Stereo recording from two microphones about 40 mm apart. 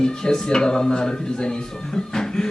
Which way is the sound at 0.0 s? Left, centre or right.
Centre.